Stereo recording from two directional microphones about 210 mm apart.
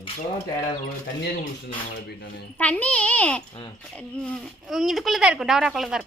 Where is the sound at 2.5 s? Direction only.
5° left (ahead or behind).